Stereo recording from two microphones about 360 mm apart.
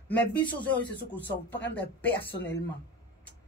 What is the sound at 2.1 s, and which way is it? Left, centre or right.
Speech, left.